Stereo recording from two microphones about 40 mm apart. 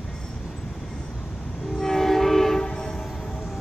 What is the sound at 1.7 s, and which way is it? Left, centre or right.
Train, centre.